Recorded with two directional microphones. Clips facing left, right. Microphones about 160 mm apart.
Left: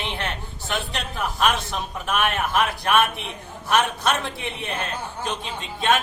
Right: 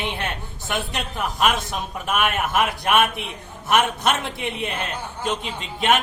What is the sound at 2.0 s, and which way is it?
A woman's voice, 10° right (ahead or behind).